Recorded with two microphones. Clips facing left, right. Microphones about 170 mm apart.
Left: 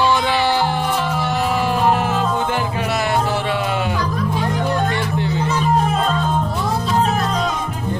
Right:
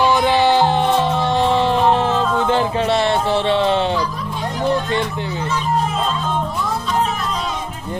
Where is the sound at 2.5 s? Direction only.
25° right (ahead or behind).